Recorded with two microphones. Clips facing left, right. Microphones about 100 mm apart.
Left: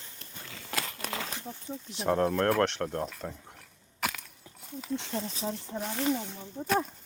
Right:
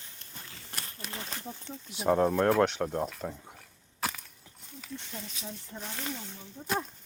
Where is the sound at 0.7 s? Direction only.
90° left.